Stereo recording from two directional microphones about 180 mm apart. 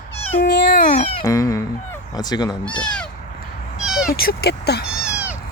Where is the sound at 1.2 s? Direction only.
15° left (ahead or behind).